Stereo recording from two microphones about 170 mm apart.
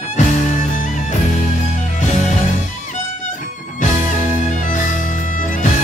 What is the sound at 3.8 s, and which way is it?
Music, 50° left (ahead or behind).